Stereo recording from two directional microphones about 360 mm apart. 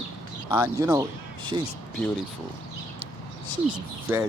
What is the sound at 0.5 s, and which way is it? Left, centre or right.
Speech, centre.